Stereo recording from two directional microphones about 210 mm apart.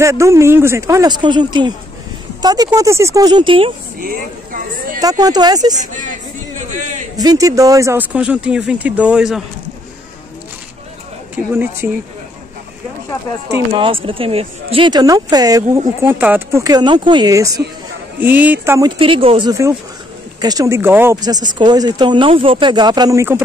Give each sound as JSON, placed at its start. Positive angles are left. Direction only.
{"t": 0.0, "sound": "speech", "side_deg": -15}
{"t": 4.0, "sound": "a sound", "side_deg": -40}
{"t": 5.2, "sound": "speech", "side_deg": -20}
{"t": 7.2, "sound": "speech", "side_deg": -15}
{"t": 11.5, "sound": "speech", "side_deg": -10}
{"t": 13.7, "sound": "speech", "side_deg": -25}